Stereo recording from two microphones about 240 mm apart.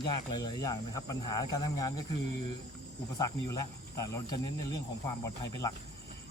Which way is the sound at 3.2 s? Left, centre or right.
Centre.